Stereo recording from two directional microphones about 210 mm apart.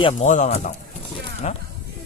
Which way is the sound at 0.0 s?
35° left (ahead or behind).